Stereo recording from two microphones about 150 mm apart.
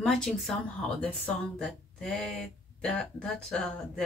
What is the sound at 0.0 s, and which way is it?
Speech, centre (ahead or behind).